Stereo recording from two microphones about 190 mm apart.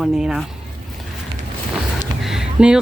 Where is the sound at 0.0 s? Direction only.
Centre (ahead or behind).